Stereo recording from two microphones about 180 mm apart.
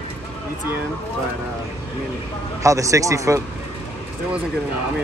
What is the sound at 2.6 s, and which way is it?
Speech, 15° right (ahead or behind).